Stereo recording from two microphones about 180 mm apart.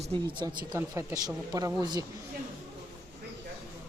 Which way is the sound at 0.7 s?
15° right (ahead or behind).